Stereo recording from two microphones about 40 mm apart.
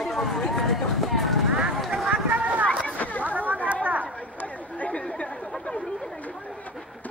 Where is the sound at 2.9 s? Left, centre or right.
Left.